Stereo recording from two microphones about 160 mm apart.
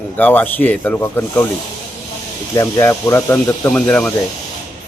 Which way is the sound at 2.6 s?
15° left (ahead or behind).